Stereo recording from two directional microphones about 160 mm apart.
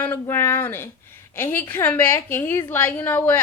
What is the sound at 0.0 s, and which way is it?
A woman's voice, 15° left (ahead or behind).